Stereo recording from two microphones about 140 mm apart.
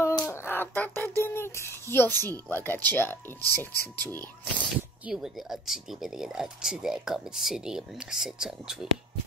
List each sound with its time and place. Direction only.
0.3 s speech: 15° left (ahead or behind)
5.0 s speech: 5° right (ahead or behind)